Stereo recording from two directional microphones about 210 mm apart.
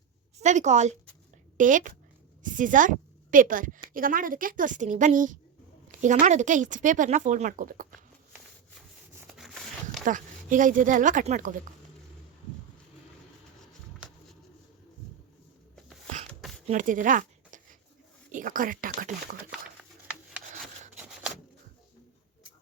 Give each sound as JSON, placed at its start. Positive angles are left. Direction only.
{"t": 0.3, "sound": "a woman's voice", "side_deg": -35}
{"t": 9.2, "sound": "a sound", "side_deg": 0}
{"t": 10.1, "sound": "speech", "side_deg": -40}
{"t": 14.0, "sound": "bird", "side_deg": -5}
{"t": 16.6, "sound": "a sound", "side_deg": -40}
{"t": 18.3, "sound": "speech", "side_deg": -40}